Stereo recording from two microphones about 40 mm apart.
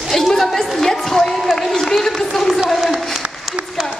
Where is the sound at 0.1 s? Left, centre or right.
Centre.